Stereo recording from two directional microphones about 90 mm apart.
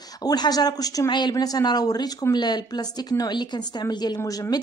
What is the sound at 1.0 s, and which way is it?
A woman's voice, 55° left (ahead or behind).